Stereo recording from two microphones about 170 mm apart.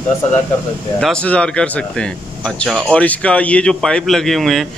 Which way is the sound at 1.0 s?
5° left (ahead or behind).